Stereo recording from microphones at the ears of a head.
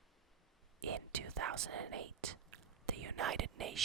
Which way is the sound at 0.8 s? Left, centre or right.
Right.